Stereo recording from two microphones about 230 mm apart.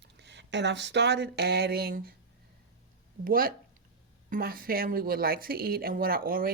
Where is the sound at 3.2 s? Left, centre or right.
Right.